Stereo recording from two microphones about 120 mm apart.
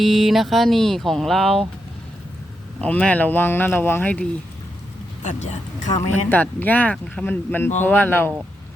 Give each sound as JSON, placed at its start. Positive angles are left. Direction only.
{"t": 0.0, "sound": "speech", "side_deg": 0}
{"t": 2.8, "sound": "speech", "side_deg": 10}
{"t": 5.2, "sound": "speech", "side_deg": 80}
{"t": 5.9, "sound": "speech", "side_deg": 20}